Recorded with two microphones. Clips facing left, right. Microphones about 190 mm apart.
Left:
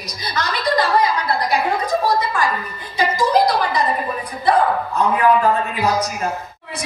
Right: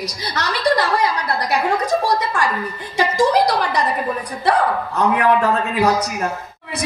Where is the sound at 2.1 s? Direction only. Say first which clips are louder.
Even; 75° right (ahead or behind).